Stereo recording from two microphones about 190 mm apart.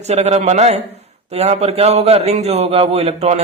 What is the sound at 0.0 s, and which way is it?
Speech, 35° right (ahead or behind).